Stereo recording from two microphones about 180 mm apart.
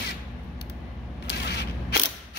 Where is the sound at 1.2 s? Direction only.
65° left (ahead or behind).